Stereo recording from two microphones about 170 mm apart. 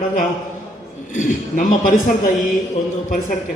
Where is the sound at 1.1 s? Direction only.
50° left (ahead or behind).